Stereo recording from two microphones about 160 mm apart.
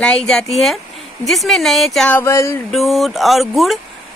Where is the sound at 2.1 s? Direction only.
20° left (ahead or behind).